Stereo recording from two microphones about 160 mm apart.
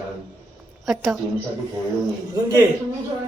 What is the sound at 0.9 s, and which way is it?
Speech, centre (ahead or behind).